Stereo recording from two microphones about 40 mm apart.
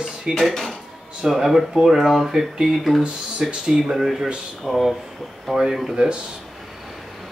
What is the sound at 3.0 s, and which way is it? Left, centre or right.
Speech, right.